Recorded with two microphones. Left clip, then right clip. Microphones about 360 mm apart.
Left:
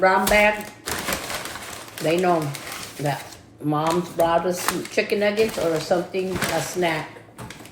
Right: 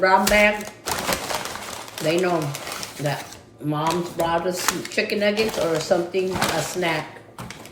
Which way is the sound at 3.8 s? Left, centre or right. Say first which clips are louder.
Left 1 dB; centre.